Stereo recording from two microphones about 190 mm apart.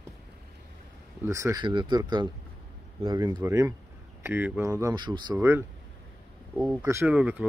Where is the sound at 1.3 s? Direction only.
15° right (ahead or behind).